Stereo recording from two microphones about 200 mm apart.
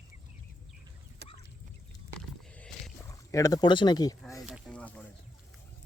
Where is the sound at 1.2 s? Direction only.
60° right (ahead or behind).